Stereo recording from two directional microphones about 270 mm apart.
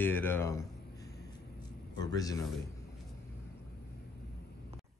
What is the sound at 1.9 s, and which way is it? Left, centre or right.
Speech, centre.